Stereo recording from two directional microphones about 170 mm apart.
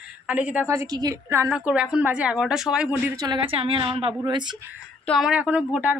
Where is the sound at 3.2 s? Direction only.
30° right (ahead or behind).